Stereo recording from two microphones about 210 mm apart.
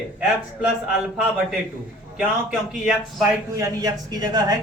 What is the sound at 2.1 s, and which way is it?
A man's voice, 5° right (ahead or behind).